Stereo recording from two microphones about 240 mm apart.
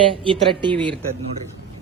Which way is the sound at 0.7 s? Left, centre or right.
Centre.